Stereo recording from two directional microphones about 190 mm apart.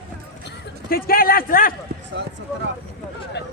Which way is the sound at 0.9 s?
50° left (ahead or behind).